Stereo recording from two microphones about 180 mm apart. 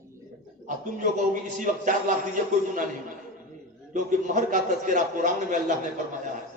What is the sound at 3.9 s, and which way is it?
A man's voice, 45° right (ahead or behind).